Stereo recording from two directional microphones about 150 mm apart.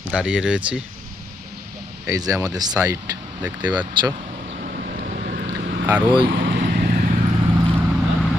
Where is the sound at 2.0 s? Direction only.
25° right (ahead or behind).